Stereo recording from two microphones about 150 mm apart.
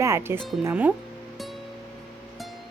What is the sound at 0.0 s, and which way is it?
Speech, 15° right (ahead or behind).